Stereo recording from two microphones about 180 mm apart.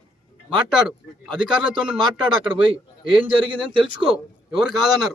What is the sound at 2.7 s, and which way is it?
Speech, 30° right (ahead or behind).